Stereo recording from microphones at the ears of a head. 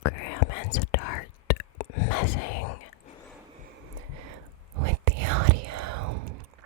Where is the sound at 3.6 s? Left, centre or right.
Right.